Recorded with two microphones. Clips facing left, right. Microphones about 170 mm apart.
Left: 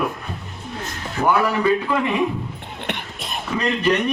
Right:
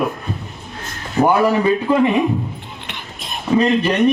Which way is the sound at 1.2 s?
25° right (ahead or behind).